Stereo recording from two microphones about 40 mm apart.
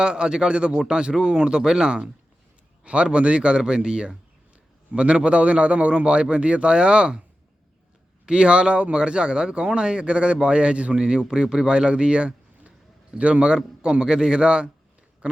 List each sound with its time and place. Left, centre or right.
0.0 s a man's voice: right
2.8 s a man's voice: right
8.3 s a man's voice: right
15.2 s chewing: right